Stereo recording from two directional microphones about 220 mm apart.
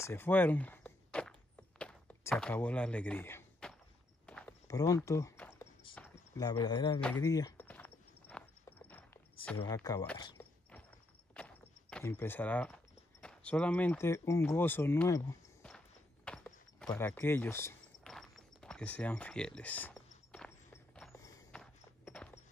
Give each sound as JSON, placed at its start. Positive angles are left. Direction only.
{"t": 0.0, "sound": "walk", "side_deg": 10}
{"t": 1.8, "sound": "a sound", "side_deg": 5}
{"t": 4.3, "sound": "walk", "side_deg": 10}
{"t": 5.9, "sound": "speech", "side_deg": 15}
{"t": 7.0, "sound": "speech", "side_deg": 5}
{"t": 7.2, "sound": "walk", "side_deg": 15}
{"t": 9.6, "sound": "speech", "side_deg": 15}
{"t": 11.3, "sound": "speech", "side_deg": 5}
{"t": 16.3, "sound": "a sound", "side_deg": 5}
{"t": 20.3, "sound": "walk", "side_deg": 5}